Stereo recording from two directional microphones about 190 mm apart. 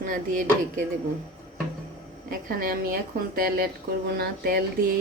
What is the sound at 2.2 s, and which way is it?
A woman's voice, 50° right (ahead or behind).